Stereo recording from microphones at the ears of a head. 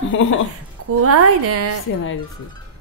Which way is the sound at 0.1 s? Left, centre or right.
Left.